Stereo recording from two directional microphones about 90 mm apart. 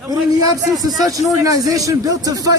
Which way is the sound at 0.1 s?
45° right (ahead or behind).